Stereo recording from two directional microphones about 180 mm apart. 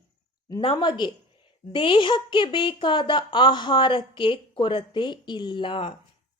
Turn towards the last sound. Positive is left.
turn(degrees=30)  # may be behind; listen again after turning